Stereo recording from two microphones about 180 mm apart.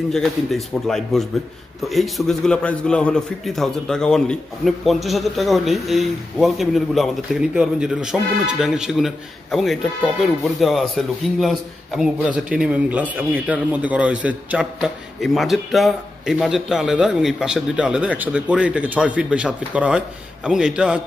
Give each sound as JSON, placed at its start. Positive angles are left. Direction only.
{"t": 0.1, "sound": "a man's voice", "side_deg": 0}